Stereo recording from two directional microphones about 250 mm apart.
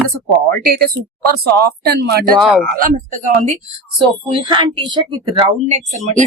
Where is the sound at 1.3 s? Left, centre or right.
Right.